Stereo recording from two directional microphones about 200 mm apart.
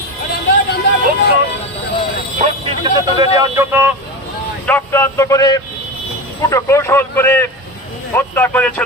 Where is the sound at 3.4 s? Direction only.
10° right (ahead or behind).